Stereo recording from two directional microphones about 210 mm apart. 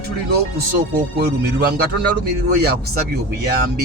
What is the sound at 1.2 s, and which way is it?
Speech, 50° right (ahead or behind).